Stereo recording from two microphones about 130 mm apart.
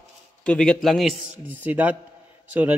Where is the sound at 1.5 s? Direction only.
10° right (ahead or behind).